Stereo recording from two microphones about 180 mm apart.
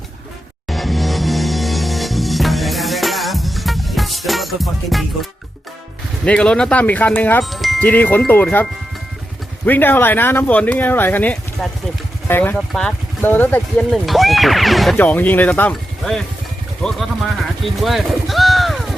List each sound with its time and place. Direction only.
0.7 s music: centre (ahead or behind)
6.2 s speech: 5° left (ahead or behind)
7.4 s chime: centre (ahead or behind)
7.9 s speech: 10° left (ahead or behind)
9.6 s speech: 10° left (ahead or behind)